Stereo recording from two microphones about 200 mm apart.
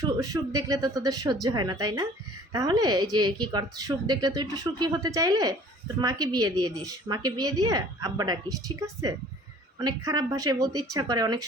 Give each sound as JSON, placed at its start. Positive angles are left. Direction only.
{"t": 0.0, "sound": "speech", "side_deg": -20}